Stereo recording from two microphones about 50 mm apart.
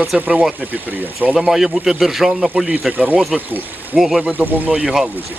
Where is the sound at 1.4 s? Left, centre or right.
Centre.